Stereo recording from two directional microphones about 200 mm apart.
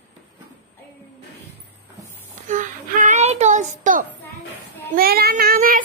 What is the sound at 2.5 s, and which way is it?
Child singing, 40° right (ahead or behind).